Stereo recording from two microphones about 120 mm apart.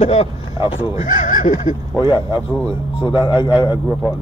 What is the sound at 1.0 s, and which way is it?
Speech, 90° left.